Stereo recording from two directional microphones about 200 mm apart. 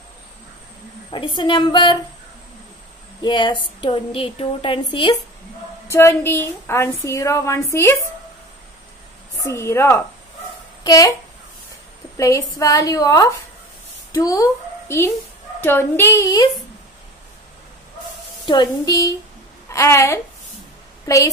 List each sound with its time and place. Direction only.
1.1 s a woman's voice: 25° left (ahead or behind)
3.2 s a woman's voice: 25° left (ahead or behind)
5.9 s a woman's voice: 10° left (ahead or behind)
9.4 s a woman's voice: 15° left (ahead or behind)
12.2 s a woman's voice: 15° left (ahead or behind)
18.4 s a woman's voice: 20° left (ahead or behind)